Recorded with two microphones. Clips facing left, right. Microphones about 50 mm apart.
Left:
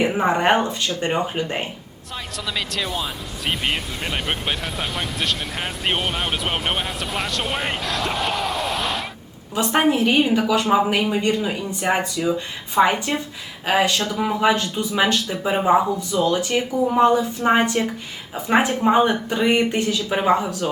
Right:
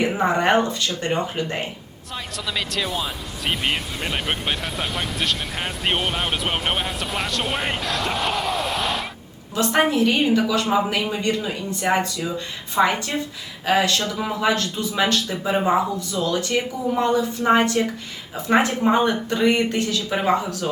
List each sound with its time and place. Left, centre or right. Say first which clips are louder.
0.0 s speech: left 1 dB; centre
2.1 s speech: even; centre
9.6 s speech: even; centre
14.0 s speech: left 2 dB; centre
14.4 s speech: left 1 dB; centre